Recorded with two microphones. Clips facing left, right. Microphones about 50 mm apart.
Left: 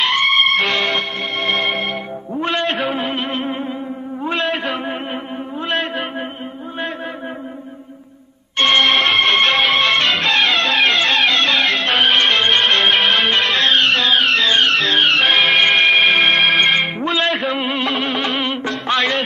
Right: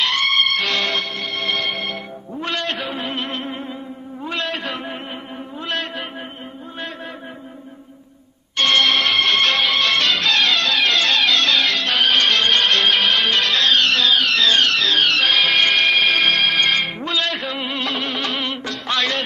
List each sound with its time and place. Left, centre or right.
0.0 s music: centre
1.5 s music: left
4.2 s a sound: left
8.5 s music: left
10.3 s music: centre
14.9 s music: centre
17.0 s music: left